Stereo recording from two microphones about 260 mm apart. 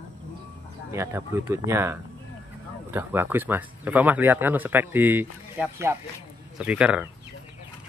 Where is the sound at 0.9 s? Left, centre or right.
Centre.